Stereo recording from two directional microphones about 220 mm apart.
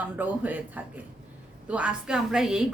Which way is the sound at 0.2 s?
10° right (ahead or behind).